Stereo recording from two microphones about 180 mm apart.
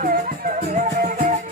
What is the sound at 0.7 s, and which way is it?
Music, 40° right (ahead or behind).